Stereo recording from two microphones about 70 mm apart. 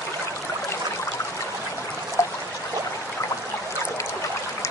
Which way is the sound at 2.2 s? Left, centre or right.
Left.